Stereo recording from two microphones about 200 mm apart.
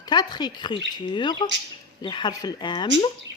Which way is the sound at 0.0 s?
20° left (ahead or behind).